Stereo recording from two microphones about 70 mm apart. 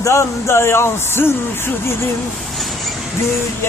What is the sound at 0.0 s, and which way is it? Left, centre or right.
Speech, left.